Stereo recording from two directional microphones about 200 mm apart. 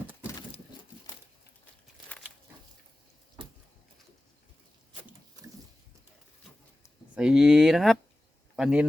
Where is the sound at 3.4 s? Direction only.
25° right (ahead or behind).